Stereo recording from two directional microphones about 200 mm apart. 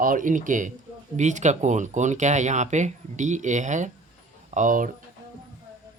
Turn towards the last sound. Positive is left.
turn(degrees=-40)  # may be behind; listen again after turning